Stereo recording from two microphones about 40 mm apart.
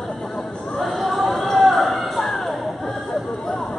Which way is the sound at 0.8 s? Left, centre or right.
Centre.